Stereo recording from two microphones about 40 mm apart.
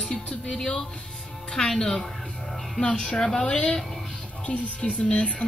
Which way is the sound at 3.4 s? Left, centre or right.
Left.